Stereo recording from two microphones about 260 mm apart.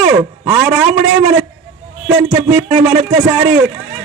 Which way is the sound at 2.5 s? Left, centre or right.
Centre.